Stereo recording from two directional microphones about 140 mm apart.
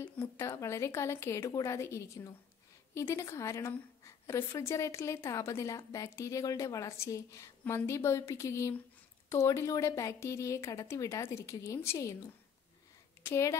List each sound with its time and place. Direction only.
0.0 s a woman's voice: 15° left (ahead or behind)
13.2 s a woman's voice: 20° left (ahead or behind)